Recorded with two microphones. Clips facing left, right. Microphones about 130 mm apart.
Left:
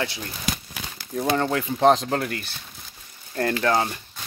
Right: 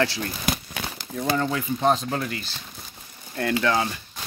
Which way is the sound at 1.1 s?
50° left (ahead or behind).